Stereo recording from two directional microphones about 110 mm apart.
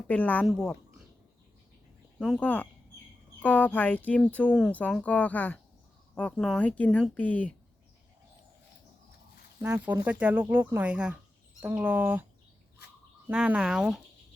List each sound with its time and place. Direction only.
0.1 s speech: 15° left (ahead or behind)
0.4 s a woman's voice: centre (ahead or behind)
2.4 s speech: 15° left (ahead or behind)
9.6 s speech: 20° right (ahead or behind)
13.2 s speech: 10° right (ahead or behind)